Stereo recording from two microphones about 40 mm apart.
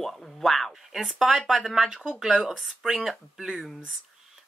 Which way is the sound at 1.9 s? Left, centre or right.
Right.